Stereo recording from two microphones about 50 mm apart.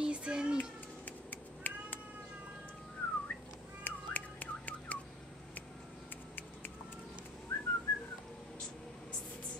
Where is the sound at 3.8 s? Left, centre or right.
Left.